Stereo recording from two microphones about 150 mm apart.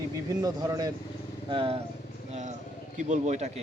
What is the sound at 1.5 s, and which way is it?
Speech, 35° right (ahead or behind).